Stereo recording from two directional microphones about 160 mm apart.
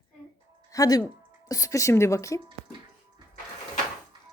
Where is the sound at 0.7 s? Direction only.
20° left (ahead or behind).